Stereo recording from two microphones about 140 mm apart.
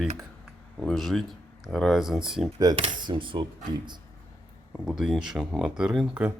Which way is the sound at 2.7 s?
40° right (ahead or behind).